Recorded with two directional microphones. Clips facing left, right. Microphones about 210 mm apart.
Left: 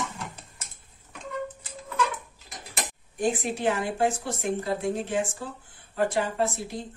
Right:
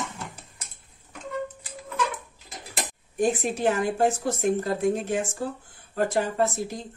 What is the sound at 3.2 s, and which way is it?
Speech, 45° right (ahead or behind).